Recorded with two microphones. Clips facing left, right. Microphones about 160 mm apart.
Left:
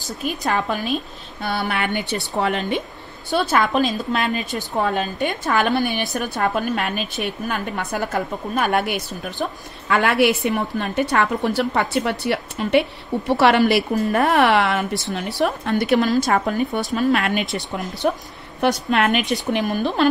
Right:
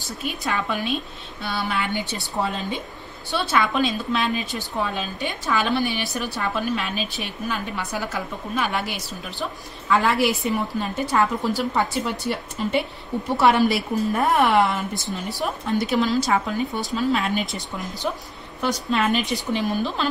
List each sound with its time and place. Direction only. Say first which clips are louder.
0.2 s a woman's voice: left 4 dB; 45° left (ahead or behind); by 2.8 s 70° left (ahead or behind)
3.3 s a woman's voice: left 4 dB; 45° left (ahead or behind)
9.9 s a woman's voice: left 3 dB; 70° left (ahead or behind); by 16.8 s 55° left (ahead or behind)
16.9 s a woman's voice: left 2 dB; 70° left (ahead or behind)
18.0 s a woman's voice: left 8 dB; 60° left (ahead or behind)